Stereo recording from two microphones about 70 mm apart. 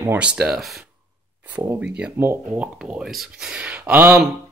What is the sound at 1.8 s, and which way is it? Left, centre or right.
Speech, centre.